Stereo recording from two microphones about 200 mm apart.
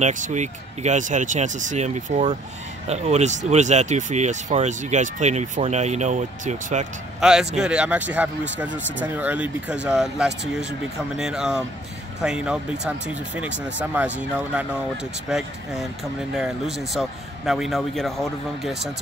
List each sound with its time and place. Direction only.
0.0 s speech: 40° right (ahead or behind)
7.2 s speech: 5° right (ahead or behind)